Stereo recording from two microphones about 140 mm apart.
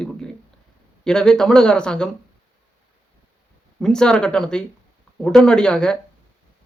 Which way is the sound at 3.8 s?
5° left (ahead or behind).